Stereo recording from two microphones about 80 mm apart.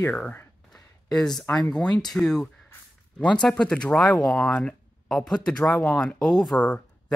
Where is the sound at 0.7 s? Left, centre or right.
Centre.